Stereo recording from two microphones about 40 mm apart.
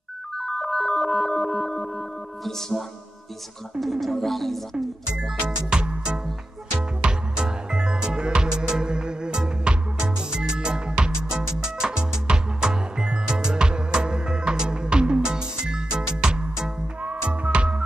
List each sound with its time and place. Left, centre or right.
0.4 s ringtone: centre
3.8 s speech: centre
5.8 s music: right
17.0 s music: right